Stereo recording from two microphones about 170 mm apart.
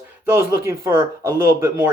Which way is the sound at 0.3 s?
15° right (ahead or behind).